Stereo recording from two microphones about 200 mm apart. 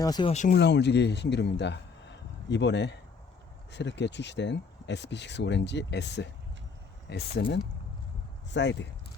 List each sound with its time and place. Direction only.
0.0 s speech: 20° left (ahead or behind)
0.3 s speech: 40° left (ahead or behind)
0.6 s a man's voice: 60° left (ahead or behind)
8.4 s speech: 60° left (ahead or behind)